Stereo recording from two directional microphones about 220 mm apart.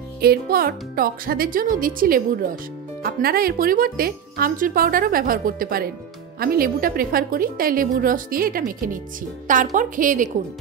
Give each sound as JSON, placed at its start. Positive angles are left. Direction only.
{"t": 0.2, "sound": "speech", "side_deg": -45}